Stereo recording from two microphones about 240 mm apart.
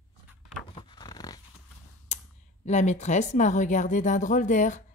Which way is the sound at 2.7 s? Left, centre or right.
Left.